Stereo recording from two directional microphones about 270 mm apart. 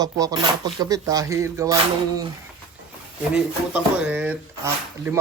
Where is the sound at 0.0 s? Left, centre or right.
Centre.